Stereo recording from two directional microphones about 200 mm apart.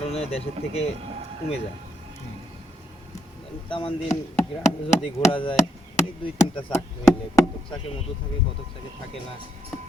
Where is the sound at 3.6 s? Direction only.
25° left (ahead or behind).